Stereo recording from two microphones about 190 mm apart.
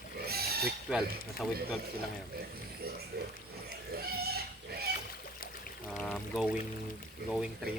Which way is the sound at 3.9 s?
55° right (ahead or behind).